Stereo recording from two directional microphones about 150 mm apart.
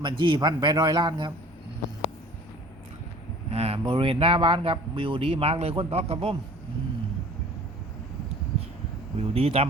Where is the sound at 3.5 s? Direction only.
40° right (ahead or behind).